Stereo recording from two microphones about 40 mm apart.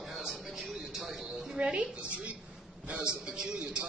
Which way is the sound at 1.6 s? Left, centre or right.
Right.